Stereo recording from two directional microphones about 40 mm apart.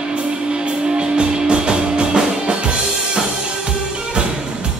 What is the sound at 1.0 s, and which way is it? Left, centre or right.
Music, right.